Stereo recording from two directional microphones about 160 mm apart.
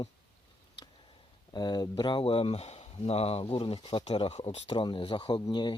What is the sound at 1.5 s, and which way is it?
Speech, 25° left (ahead or behind).